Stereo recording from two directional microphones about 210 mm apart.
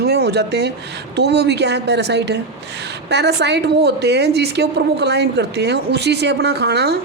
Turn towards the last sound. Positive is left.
turn(degrees=-50)  # may be behind; listen again after turning